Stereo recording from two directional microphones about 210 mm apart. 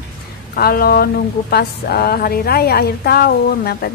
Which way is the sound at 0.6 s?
45° left (ahead or behind).